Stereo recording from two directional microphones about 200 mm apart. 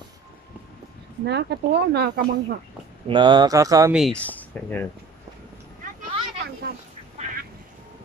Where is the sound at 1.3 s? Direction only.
55° right (ahead or behind).